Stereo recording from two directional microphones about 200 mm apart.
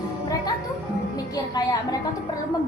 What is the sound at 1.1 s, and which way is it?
Speech, 20° left (ahead or behind).